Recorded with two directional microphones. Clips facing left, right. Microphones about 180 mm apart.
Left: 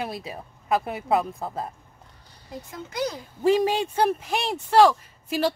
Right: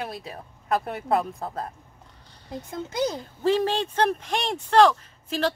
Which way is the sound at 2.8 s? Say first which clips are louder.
Right 2 dB; 25° right (ahead or behind).